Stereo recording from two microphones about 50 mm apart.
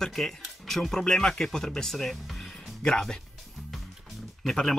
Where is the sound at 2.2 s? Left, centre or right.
Centre.